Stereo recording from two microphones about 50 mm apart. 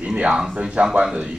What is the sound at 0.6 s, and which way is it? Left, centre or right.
Speech, right.